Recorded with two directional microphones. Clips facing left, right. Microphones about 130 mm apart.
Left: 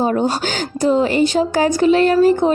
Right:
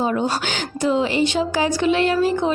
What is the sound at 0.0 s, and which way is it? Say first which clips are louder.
Speech: left 4 dB; 40° left (ahead or behind).